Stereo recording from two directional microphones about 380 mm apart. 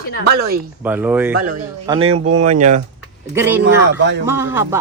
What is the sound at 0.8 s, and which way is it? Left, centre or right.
Speech, centre.